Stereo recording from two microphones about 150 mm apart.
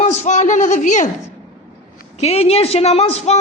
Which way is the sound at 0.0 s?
50° left (ahead or behind).